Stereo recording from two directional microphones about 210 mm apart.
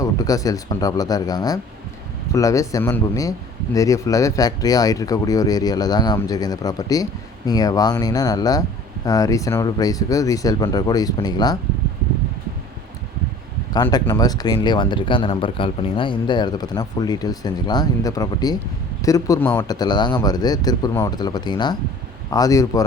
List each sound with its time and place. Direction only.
0.0 s speech: 15° left (ahead or behind)
13.7 s speech: 15° left (ahead or behind)